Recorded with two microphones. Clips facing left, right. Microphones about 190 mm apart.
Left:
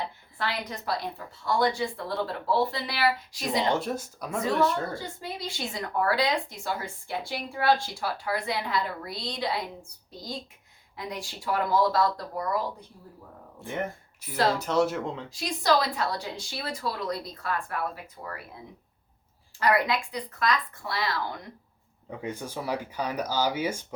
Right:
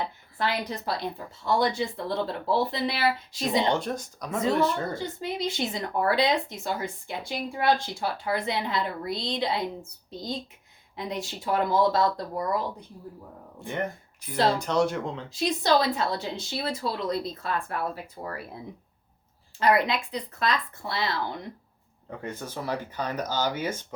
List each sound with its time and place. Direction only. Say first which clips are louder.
0.3 s speech: right 4 dB; 25° right (ahead or behind)
3.7 s speech: right 1 dB; 5° left (ahead or behind)
4.9 s speech: right 5 dB; 20° right (ahead or behind)
13.7 s speech: right 1 dB; 5° left (ahead or behind)
15.3 s speech: right 2 dB; 25° right (ahead or behind)
19.5 s speech: right 2 dB; 25° right (ahead or behind)
22.1 s speech: left 1 dB; 10° left (ahead or behind)